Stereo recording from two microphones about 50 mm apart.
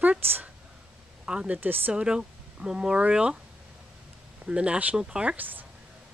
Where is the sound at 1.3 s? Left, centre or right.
Centre.